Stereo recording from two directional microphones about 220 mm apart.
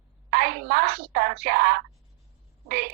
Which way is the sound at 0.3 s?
45° right (ahead or behind).